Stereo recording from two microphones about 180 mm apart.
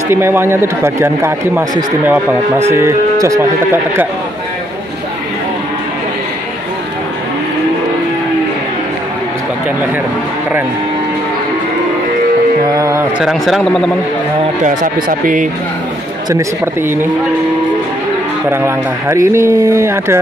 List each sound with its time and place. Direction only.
0.1 s speech: 15° right (ahead or behind)
12.6 s speech: 20° right (ahead or behind)
13.2 s a man's voice: centre (ahead or behind)
14.6 s speech: 45° right (ahead or behind)
16.3 s speech: 15° right (ahead or behind)
18.5 s speech: 15° right (ahead or behind)